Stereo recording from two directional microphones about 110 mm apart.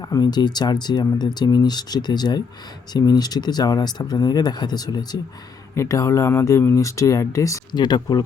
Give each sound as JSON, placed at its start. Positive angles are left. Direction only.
{"t": 0.0, "sound": "speech", "side_deg": 35}
{"t": 7.7, "sound": "speech", "side_deg": 40}